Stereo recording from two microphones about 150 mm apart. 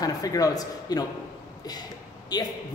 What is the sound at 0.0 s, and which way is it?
A man's voice, 25° left (ahead or behind).